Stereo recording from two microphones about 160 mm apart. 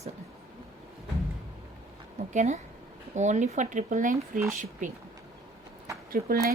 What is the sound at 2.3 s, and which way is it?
A woman's voice, 45° right (ahead or behind).